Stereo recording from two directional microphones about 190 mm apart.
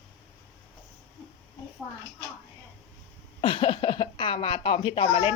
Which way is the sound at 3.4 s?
25° left (ahead or behind).